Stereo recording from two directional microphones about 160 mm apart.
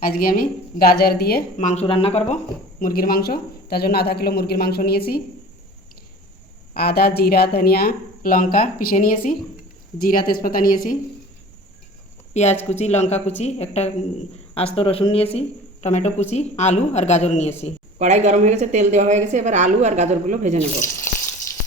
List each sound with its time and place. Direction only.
0.0 s speech: 65° left (ahead or behind)
1.5 s speech: 45° left (ahead or behind)
2.8 s speech: 65° left (ahead or behind)
6.7 s speech: 75° left (ahead or behind)
12.3 s speech: 45° left (ahead or behind)
18.0 s a woman's voice: 45° right (ahead or behind)